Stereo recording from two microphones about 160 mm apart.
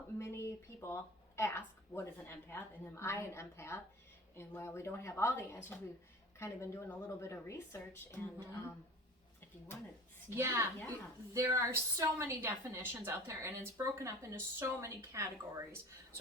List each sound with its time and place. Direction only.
0.2 s a woman's voice: 15° left (ahead or behind)
10.2 s a woman's voice: 15° right (ahead or behind)